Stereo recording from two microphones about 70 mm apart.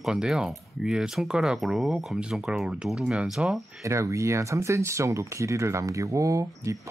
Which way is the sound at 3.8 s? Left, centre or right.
Right.